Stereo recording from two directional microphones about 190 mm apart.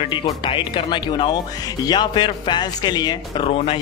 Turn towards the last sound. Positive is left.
turn(degrees=30)  # may be behind; listen again after turning